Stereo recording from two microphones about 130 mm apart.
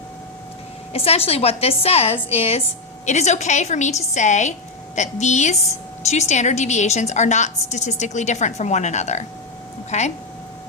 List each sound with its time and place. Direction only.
0.9 s a woman's voice: 50° left (ahead or behind)
3.1 s a woman's voice: 60° left (ahead or behind)